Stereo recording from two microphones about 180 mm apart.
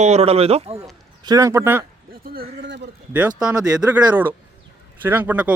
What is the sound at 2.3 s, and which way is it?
Speech, 65° right (ahead or behind).